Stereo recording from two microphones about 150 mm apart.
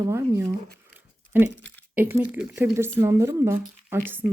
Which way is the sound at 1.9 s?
10° right (ahead or behind).